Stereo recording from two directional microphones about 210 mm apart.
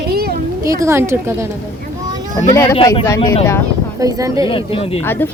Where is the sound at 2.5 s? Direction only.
15° left (ahead or behind).